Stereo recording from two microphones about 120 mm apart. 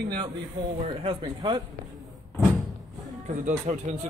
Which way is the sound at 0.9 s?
45° right (ahead or behind).